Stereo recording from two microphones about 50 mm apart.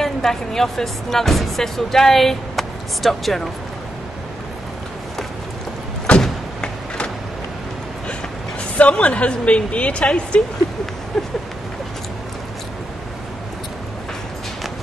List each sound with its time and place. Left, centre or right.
0.0 s speech: centre
6.1 s vehicle: centre
8.7 s speech: left
11.1 s a sound: centre